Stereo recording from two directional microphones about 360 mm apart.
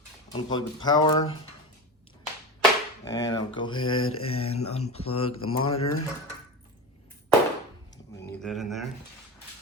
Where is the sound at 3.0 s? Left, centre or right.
Centre.